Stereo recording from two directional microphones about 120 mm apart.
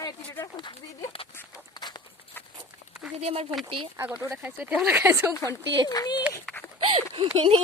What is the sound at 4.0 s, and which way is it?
Speech, 15° right (ahead or behind).